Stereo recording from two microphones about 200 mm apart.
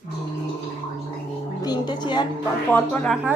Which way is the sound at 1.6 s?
20° left (ahead or behind).